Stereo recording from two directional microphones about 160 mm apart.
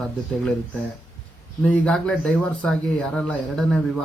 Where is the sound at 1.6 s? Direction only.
10° left (ahead or behind).